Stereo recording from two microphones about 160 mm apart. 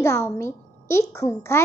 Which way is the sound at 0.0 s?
15° left (ahead or behind).